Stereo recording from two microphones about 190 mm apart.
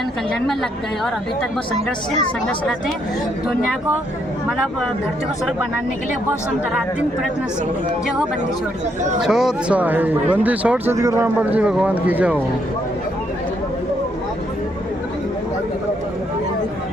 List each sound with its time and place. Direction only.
0.4 s a woman's voice: centre (ahead or behind)
2.5 s a woman's voice: 5° left (ahead or behind)
9.2 s speech: centre (ahead or behind)